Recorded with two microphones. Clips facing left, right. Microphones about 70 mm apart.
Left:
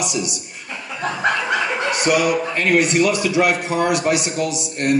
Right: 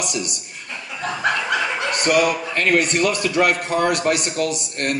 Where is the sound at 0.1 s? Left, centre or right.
Right.